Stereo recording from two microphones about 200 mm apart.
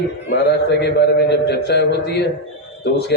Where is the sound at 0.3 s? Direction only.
55° left (ahead or behind).